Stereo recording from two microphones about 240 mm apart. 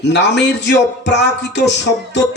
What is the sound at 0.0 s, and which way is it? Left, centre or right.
Speech, left.